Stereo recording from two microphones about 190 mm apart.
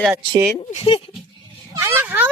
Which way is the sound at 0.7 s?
30° left (ahead or behind).